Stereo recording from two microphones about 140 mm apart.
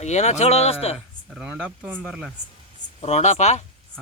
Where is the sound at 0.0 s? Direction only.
55° left (ahead or behind).